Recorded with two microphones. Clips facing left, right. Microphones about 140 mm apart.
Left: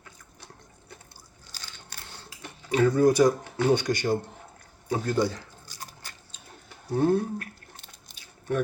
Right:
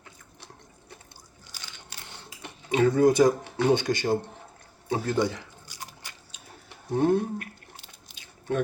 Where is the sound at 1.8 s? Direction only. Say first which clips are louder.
Even; 20° right (ahead or behind).